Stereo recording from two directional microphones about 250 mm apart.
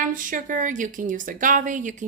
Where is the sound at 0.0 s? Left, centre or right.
Right.